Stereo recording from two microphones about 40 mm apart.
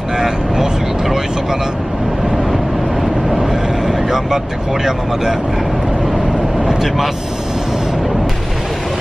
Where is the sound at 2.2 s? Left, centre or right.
Centre.